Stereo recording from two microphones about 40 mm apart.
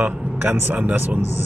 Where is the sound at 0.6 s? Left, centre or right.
Right.